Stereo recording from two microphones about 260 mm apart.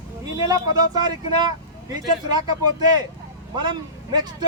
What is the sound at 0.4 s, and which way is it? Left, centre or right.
Speech, centre.